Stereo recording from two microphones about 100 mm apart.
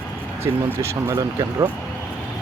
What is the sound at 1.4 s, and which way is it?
Speech, 40° right (ahead or behind).